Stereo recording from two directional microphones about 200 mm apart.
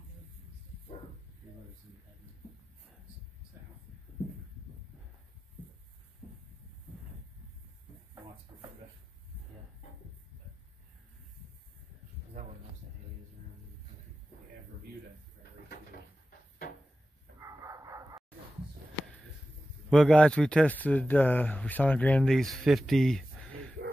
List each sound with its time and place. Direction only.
16.3 s cupboard open or close: 45° left (ahead or behind)
17.4 s bow-wow: 15° right (ahead or behind)
19.9 s speech: 5° left (ahead or behind)